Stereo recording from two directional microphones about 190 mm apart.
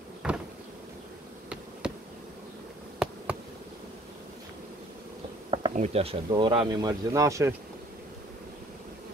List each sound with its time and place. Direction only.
0.2 s vehicle: 5° right (ahead or behind)
1.8 s bee: 5° right (ahead or behind)
3.0 s insect: 5° right (ahead or behind)
5.5 s speech: 30° right (ahead or behind)